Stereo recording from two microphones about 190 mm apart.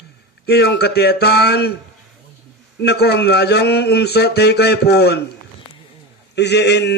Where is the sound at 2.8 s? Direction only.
60° left (ahead or behind).